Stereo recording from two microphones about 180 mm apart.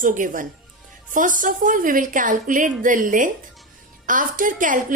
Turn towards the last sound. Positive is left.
turn(degrees=-45)  # may be behind; listen again after turning